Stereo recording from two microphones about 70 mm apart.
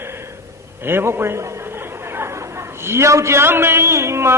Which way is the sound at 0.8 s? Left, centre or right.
Right.